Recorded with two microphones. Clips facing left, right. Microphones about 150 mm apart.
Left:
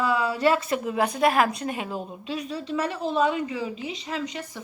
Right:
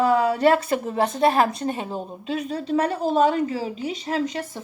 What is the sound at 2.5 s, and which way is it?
A woman's voice, 40° right (ahead or behind).